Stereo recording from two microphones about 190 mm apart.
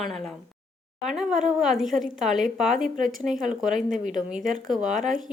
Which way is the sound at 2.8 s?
45° right (ahead or behind).